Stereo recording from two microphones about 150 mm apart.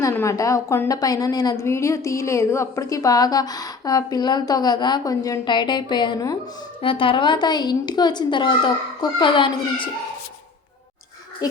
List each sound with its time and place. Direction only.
0.0 s a woman's voice: 20° left (ahead or behind)